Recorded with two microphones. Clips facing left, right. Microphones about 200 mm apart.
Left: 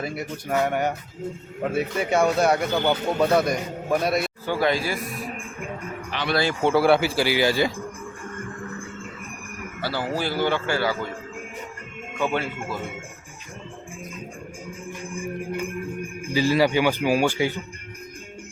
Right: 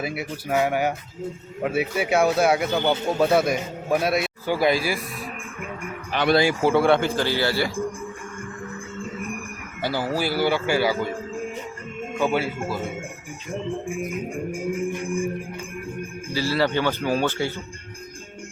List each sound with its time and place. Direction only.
0.0 s speech: 5° right (ahead or behind)
6.1 s speech: 45° right (ahead or behind)
6.3 s speech: 10° right (ahead or behind); by 7.7 s 15° left (ahead or behind)
9.8 s speech: 10° right (ahead or behind)
12.2 s speech: 10° right (ahead or behind)
14.8 s music: 55° right (ahead or behind)
16.2 s a man's voice: 15° left (ahead or behind)